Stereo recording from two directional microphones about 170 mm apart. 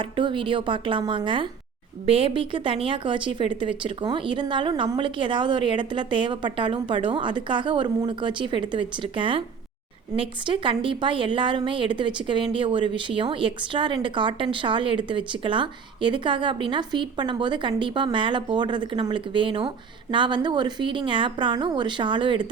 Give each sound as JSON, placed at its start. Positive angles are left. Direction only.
{"t": 0.0, "sound": "a woman's voice", "side_deg": -30}